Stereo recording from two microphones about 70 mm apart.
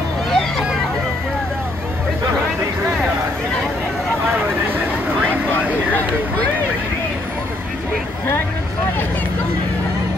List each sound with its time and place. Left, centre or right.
0.3 s vehicle: centre